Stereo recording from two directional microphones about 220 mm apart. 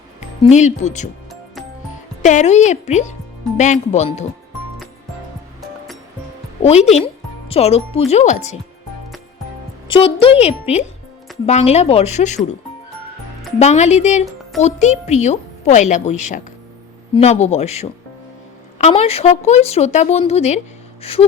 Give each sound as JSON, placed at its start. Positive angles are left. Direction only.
{"t": 0.5, "sound": "a woman's voice", "side_deg": 30}
{"t": 2.2, "sound": "a woman's voice", "side_deg": 30}
{"t": 6.6, "sound": "a woman's voice", "side_deg": 30}
{"t": 9.9, "sound": "speech", "side_deg": 25}
{"t": 13.6, "sound": "a woman's voice", "side_deg": 30}